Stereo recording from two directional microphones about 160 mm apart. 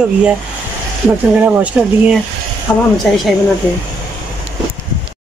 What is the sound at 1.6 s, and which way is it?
Speech, 10° right (ahead or behind).